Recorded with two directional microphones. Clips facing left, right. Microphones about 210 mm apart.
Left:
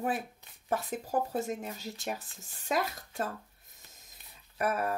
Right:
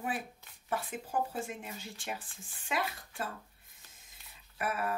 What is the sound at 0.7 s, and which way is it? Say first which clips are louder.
Speech: left 4 dB; 40° left (ahead or behind).